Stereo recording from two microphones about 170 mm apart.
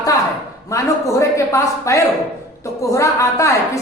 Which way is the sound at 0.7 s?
20° left (ahead or behind).